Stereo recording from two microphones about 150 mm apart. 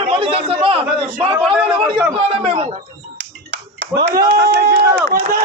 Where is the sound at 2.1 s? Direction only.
40° right (ahead or behind).